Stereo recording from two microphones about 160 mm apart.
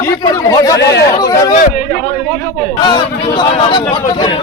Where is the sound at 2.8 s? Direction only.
30° left (ahead or behind).